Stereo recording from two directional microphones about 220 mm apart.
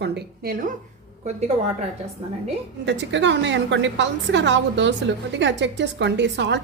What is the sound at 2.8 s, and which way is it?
A woman's voice, 55° right (ahead or behind).